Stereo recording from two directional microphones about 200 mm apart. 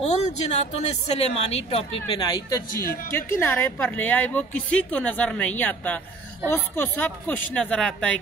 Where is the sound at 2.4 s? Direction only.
15° left (ahead or behind).